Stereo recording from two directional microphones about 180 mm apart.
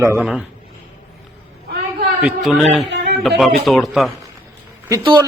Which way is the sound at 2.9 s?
70° right (ahead or behind).